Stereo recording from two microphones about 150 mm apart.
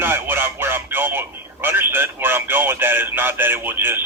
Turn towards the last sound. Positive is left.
turn(degrees=-15)  # may be behind; listen again after turning